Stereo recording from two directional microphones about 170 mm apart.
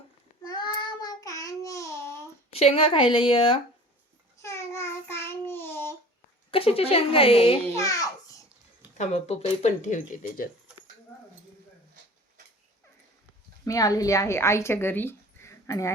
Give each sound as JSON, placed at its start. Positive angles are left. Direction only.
{"t": 0.4, "sound": "child singing", "side_deg": 25}
{"t": 2.5, "sound": "a woman's voice", "side_deg": 35}
{"t": 4.4, "sound": "child singing", "side_deg": 15}
{"t": 6.5, "sound": "a woman's voice", "side_deg": 35}
{"t": 7.8, "sound": "a child's voice", "side_deg": 20}
{"t": 9.0, "sound": "speech", "side_deg": 40}
{"t": 13.7, "sound": "speech", "side_deg": 20}